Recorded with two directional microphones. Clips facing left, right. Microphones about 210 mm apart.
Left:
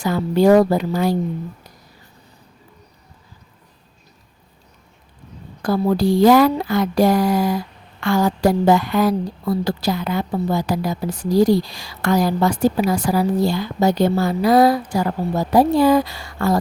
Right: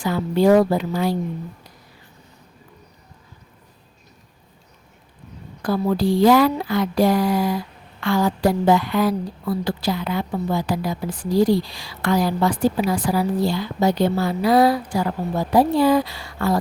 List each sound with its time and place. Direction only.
0.0 s a woman's voice: 45° left (ahead or behind)
5.6 s a woman's voice: 40° left (ahead or behind)